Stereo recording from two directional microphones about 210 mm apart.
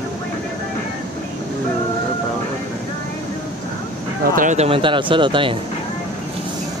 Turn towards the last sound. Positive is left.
turn(degrees=-25)  # may be behind; listen again after turning